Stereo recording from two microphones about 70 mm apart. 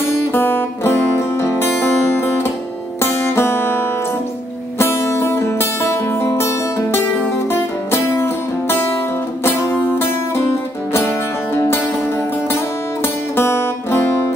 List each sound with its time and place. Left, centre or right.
0.3 s music: left